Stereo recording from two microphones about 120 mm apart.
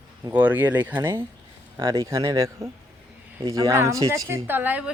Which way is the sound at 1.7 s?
35° right (ahead or behind).